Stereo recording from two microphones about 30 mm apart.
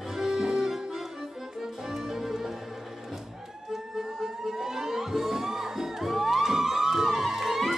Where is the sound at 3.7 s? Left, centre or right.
Centre.